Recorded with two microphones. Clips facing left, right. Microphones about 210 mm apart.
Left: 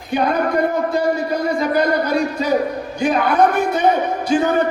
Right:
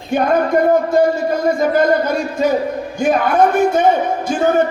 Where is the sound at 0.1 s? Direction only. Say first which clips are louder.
Right 3 dB; 45° right (ahead or behind).